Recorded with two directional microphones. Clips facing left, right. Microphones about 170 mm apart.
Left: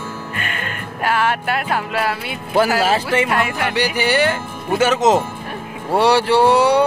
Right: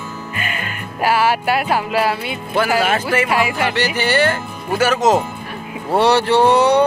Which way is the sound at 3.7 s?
10° left (ahead or behind).